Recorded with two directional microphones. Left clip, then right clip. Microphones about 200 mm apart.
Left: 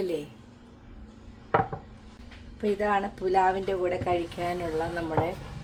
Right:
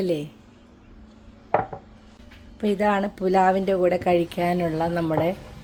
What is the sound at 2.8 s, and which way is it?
Speech, 60° right (ahead or behind).